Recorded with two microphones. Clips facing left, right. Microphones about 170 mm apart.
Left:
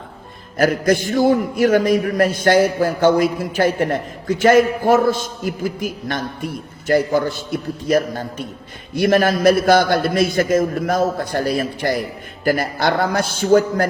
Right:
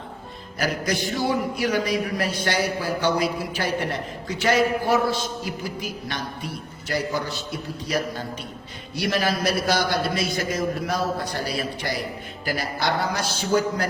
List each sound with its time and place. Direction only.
0.5 s a man's voice: 50° left (ahead or behind)